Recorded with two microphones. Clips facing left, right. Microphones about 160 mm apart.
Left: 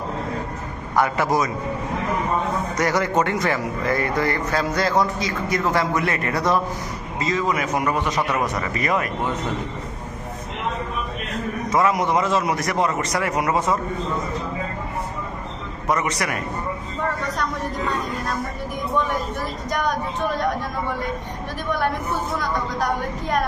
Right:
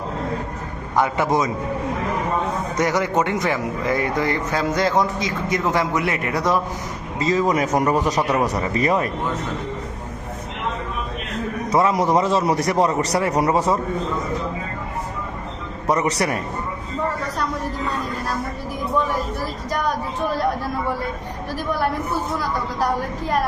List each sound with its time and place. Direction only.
0.9 s a man's voice: 20° right (ahead or behind)
2.7 s speech: 15° right (ahead or behind)
7.2 s a man's voice: 35° right (ahead or behind)
11.7 s a man's voice: 30° right (ahead or behind)
15.9 s a man's voice: 35° right (ahead or behind)